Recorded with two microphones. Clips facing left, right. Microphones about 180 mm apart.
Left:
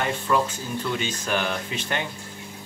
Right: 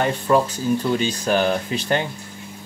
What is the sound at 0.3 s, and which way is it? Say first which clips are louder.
Speech: right 7 dB; 35° right (ahead or behind).